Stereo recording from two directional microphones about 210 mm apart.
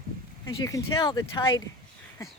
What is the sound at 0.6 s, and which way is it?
Speech, 15° left (ahead or behind).